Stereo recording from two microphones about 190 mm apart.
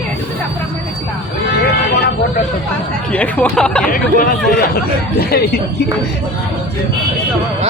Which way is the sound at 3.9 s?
45° left (ahead or behind).